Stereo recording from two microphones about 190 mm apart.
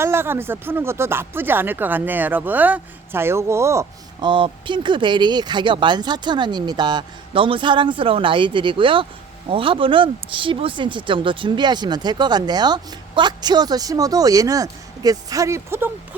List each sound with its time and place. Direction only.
0.0 s speech: 10° right (ahead or behind)